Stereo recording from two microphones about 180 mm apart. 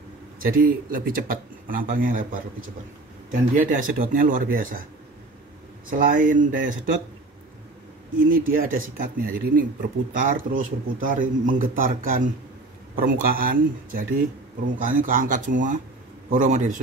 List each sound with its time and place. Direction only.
0.4 s a man's voice: 50° right (ahead or behind)
3.3 s a man's voice: 50° right (ahead or behind)
5.9 s a man's voice: 50° right (ahead or behind)
8.3 s a man's voice: 50° right (ahead or behind)